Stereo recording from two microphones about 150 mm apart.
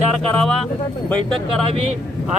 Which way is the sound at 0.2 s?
5° left (ahead or behind).